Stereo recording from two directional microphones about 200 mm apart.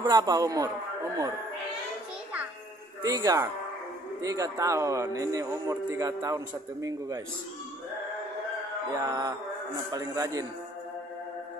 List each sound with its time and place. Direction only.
0.0 s a man's voice: 20° right (ahead or behind)
3.0 s a man's voice: 15° right (ahead or behind)
8.9 s a man's voice: 15° right (ahead or behind)